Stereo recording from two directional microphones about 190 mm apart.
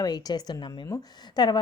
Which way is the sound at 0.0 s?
20° left (ahead or behind).